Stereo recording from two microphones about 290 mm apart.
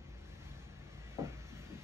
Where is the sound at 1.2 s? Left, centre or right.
Centre.